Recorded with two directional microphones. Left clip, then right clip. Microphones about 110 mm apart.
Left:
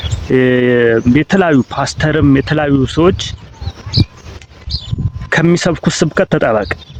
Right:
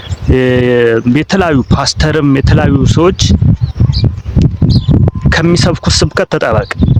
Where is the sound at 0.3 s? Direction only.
35° right (ahead or behind).